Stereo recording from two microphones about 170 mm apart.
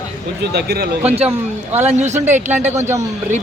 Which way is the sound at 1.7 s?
40° right (ahead or behind).